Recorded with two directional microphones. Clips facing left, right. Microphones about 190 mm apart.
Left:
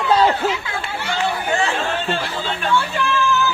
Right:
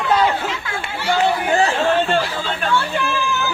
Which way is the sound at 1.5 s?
35° right (ahead or behind).